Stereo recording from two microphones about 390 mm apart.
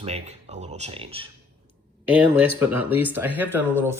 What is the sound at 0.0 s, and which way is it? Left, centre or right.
Speech, centre.